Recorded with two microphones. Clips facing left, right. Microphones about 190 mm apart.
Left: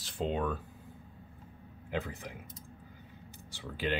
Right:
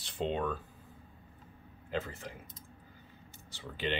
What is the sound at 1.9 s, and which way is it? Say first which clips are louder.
Speech: even; 15° left (ahead or behind).